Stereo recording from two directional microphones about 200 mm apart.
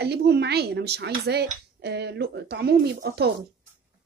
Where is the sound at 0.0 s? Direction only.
55° right (ahead or behind).